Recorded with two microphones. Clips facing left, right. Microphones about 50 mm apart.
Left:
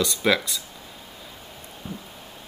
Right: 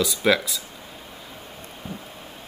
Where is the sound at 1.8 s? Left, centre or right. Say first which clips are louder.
Even; centre.